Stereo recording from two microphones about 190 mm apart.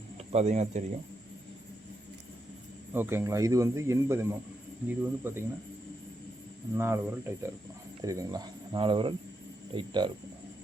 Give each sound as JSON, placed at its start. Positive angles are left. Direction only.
{"t": 0.3, "sound": "speech", "side_deg": -35}
{"t": 2.9, "sound": "speech", "side_deg": -10}
{"t": 6.7, "sound": "speech", "side_deg": -15}